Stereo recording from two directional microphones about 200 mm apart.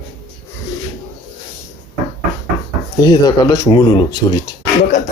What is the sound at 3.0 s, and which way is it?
Speech, 20° left (ahead or behind).